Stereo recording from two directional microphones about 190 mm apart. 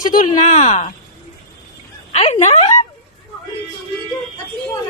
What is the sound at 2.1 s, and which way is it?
Speech, 35° left (ahead or behind).